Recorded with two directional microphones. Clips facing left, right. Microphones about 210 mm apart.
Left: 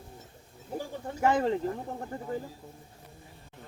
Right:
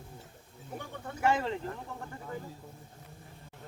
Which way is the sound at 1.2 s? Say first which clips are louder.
Left 4 dB; 40° left (ahead or behind).